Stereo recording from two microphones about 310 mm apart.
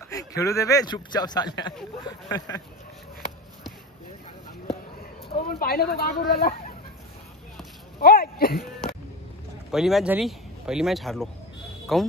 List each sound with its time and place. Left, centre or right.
0.1 s a man's voice: centre
5.5 s speech: left
8.0 s speech: left
9.7 s speech: centre